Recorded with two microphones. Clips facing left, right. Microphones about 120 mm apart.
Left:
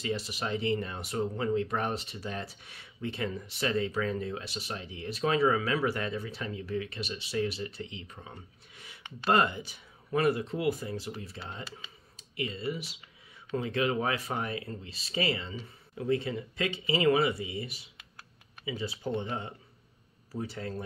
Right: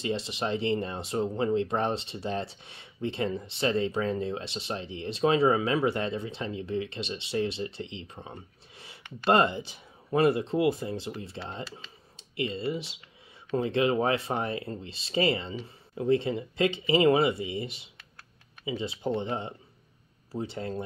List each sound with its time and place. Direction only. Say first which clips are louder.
0.0 s speech: right 3 dB; 25° right (ahead or behind)